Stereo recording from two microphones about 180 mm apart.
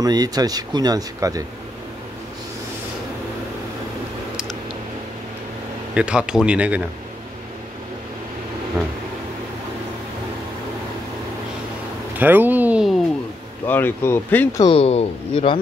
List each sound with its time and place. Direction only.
0.0 s speech: 20° right (ahead or behind)
5.9 s speech: 5° right (ahead or behind)
12.2 s a sound: 10° right (ahead or behind)
13.7 s speech: 10° left (ahead or behind)
14.6 s speech: 30° left (ahead or behind)